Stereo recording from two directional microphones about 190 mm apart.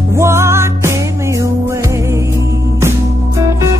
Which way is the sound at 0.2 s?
15° right (ahead or behind).